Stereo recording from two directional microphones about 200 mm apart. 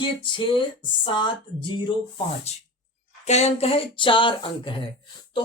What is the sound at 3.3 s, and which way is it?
Speech, 35° left (ahead or behind).